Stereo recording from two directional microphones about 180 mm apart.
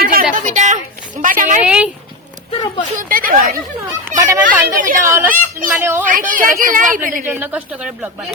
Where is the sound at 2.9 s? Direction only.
50° right (ahead or behind).